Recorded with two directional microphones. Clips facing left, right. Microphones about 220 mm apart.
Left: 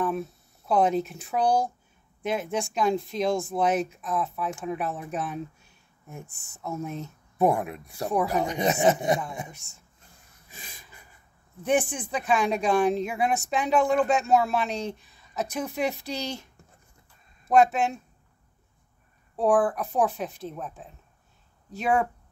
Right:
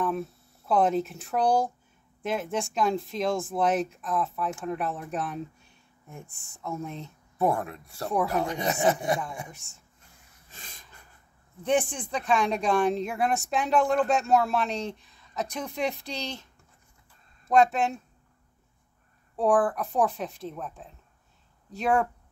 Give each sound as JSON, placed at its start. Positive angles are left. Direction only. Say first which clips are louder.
{"t": 0.7, "sound": "speech", "louder": "left 1 dB", "side_deg": 0}
{"t": 7.3, "sound": "speech", "louder": "left 3 dB", "side_deg": 15}
{"t": 8.1, "sound": "speech", "louder": "left 1 dB", "side_deg": 0}
{"t": 8.4, "sound": "speech", "louder": "left 3 dB", "side_deg": 20}
{"t": 9.5, "sound": "speech", "louder": "even", "side_deg": 0}
{"t": 10.5, "sound": "a sound", "louder": "left 2 dB", "side_deg": 10}
{"t": 11.6, "sound": "speech", "louder": "left 1 dB", "side_deg": 5}
{"t": 17.5, "sound": "speech", "louder": "left 1 dB", "side_deg": 5}
{"t": 19.3, "sound": "speech", "louder": "left 1 dB", "side_deg": 0}